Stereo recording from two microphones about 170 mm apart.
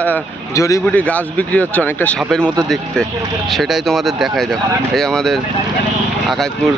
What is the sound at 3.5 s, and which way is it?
Speech, centre (ahead or behind).